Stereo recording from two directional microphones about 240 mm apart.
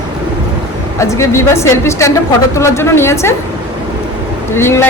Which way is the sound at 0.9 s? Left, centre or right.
Centre.